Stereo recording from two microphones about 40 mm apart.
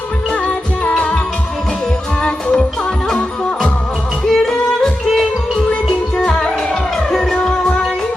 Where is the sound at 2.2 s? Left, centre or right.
Left.